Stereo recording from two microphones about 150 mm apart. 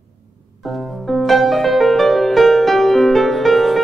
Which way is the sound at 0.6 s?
Centre (ahead or behind).